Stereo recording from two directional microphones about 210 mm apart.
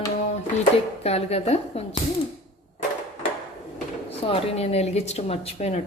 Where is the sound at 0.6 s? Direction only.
30° left (ahead or behind).